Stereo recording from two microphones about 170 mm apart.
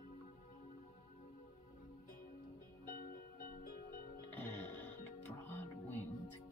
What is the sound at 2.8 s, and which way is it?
Music, 55° left (ahead or behind).